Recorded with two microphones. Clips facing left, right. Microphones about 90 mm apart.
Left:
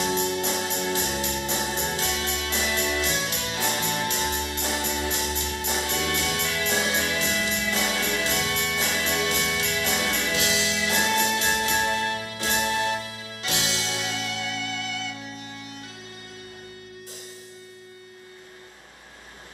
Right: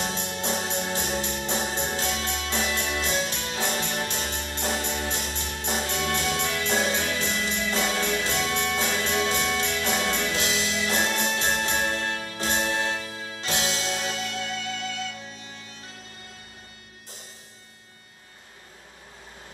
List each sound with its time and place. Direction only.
0.2 s music: 35° right (ahead or behind)
4.0 s music: 35° left (ahead or behind)
4.5 s music: 35° right (ahead or behind)